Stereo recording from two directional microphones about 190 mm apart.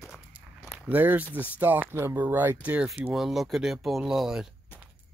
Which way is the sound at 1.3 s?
10° right (ahead or behind).